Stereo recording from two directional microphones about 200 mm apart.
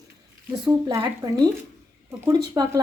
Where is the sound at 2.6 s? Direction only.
20° right (ahead or behind).